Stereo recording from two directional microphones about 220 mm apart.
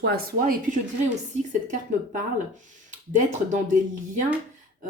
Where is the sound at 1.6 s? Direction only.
35° right (ahead or behind).